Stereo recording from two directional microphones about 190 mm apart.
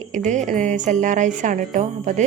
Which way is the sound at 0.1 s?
40° right (ahead or behind).